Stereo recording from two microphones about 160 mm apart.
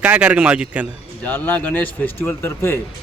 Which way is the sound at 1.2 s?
10° left (ahead or behind).